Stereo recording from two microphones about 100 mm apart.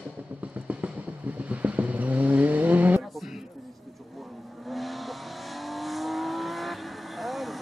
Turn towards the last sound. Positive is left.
turn(degrees=0)  # may be behind; listen again after turning